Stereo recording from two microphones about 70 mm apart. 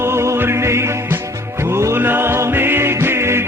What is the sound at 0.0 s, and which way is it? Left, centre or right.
Music, right.